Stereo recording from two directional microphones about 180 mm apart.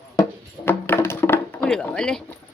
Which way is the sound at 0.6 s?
10° left (ahead or behind).